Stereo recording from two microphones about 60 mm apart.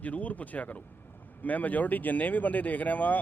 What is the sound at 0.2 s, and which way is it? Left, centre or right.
Speech, left.